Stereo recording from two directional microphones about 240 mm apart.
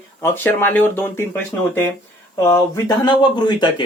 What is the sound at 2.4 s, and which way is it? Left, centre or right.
Speech, centre.